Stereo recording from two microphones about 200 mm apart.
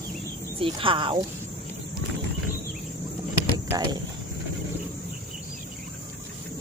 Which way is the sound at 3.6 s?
20° right (ahead or behind).